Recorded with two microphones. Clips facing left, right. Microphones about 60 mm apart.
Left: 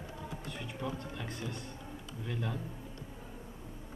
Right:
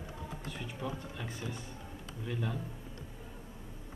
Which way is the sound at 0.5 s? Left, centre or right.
Centre.